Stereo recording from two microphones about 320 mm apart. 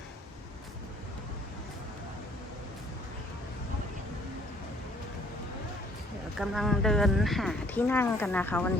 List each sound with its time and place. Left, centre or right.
6.4 s speech: centre